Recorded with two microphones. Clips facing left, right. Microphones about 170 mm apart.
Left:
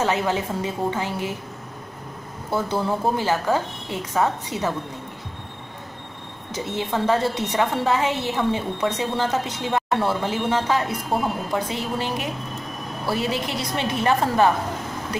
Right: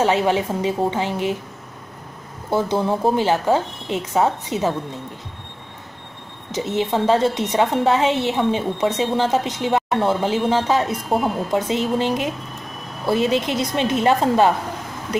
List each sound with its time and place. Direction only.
0.0 s a woman's voice: 20° right (ahead or behind)
2.5 s a woman's voice: 20° right (ahead or behind)
6.5 s a woman's voice: 20° right (ahead or behind)